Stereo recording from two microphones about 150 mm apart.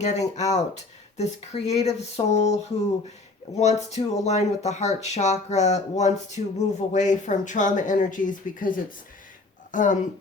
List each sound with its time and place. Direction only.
0.0 s speech: 50° left (ahead or behind)